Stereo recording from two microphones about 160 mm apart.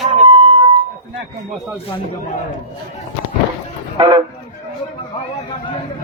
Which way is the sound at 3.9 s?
35° right (ahead or behind).